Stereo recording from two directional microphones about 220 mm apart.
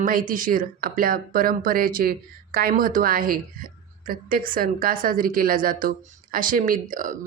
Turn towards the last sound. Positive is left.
turn(degrees=-40)  # may be behind; listen again after turning